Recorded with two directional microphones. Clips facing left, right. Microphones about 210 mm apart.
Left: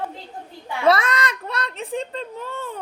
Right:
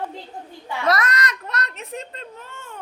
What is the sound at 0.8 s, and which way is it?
A child's voice, 30° left (ahead or behind).